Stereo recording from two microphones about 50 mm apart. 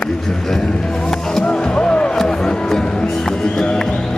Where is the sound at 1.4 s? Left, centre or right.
Left.